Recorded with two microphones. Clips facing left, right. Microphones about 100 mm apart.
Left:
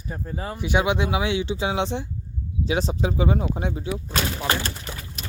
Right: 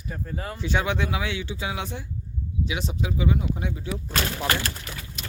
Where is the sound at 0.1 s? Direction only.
20° left (ahead or behind).